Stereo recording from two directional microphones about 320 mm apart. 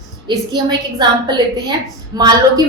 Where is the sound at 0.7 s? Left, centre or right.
Centre.